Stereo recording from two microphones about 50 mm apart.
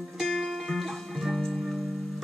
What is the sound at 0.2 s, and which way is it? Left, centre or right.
Music, centre.